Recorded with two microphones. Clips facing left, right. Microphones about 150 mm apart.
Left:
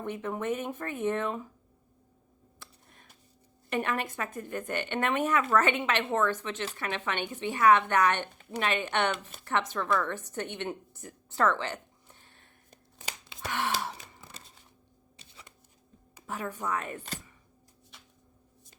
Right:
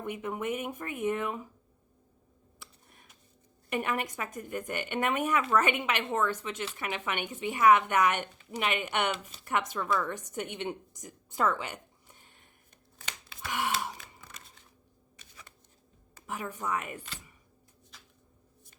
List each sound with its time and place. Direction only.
0.0 s a woman's voice: 15° right (ahead or behind)
3.7 s a woman's voice: 10° right (ahead or behind)
12.2 s a sound: 15° right (ahead or behind)
13.5 s gasp: 10° right (ahead or behind)
15.2 s shuffling cards: 25° left (ahead or behind)
16.2 s a woman's voice: 10° right (ahead or behind)